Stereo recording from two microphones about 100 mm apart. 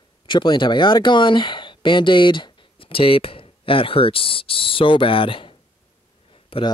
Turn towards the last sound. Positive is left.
turn(degrees=65)  # may be behind; listen again after turning